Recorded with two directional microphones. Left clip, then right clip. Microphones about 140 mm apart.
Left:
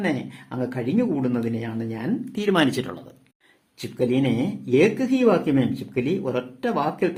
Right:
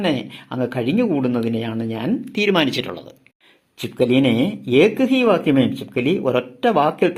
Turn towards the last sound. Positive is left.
turn(degrees=-20)  # may be behind; listen again after turning